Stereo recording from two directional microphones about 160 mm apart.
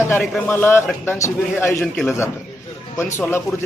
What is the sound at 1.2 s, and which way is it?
Speech, 15° left (ahead or behind).